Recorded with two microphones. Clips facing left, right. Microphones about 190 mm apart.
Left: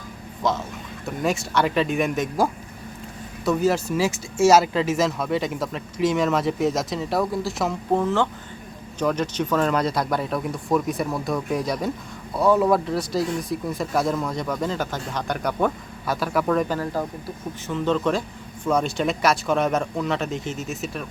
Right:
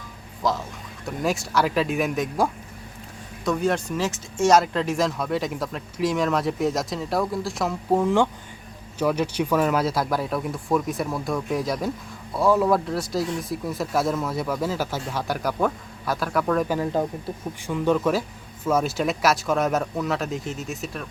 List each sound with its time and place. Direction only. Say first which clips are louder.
0.4 s speech: left 1 dB; centre (ahead or behind)
8.0 s speech: right 2 dB; 15° right (ahead or behind)
16.6 s speech: right 2 dB; 15° right (ahead or behind)
17.7 s speech: right 1 dB; 10° right (ahead or behind)